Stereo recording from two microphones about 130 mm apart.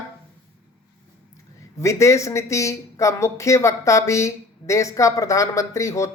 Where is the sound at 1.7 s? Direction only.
25° left (ahead or behind).